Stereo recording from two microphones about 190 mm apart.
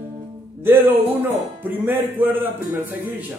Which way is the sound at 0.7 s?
10° right (ahead or behind).